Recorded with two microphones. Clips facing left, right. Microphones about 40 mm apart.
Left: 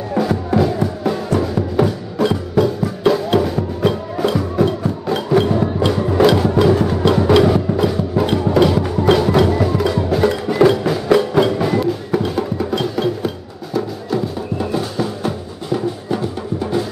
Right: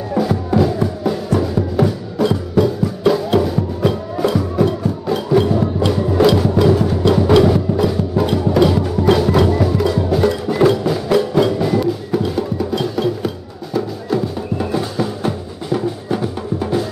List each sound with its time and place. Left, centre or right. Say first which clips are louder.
0.1 s music: even; centre